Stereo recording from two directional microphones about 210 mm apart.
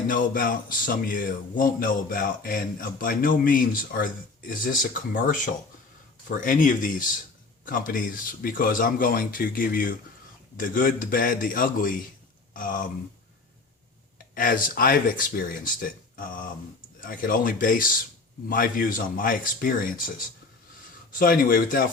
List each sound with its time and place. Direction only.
0.1 s a man's voice: 40° left (ahead or behind)
14.3 s a man's voice: 40° left (ahead or behind)